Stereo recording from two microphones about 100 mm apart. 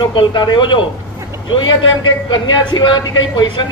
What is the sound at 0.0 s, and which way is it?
Speech, 50° left (ahead or behind).